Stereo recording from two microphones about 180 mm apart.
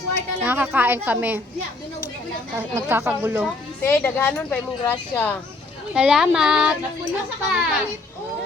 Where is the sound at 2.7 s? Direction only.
10° right (ahead or behind).